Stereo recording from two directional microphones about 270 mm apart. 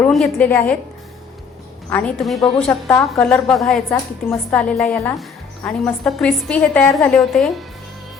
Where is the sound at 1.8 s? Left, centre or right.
Centre.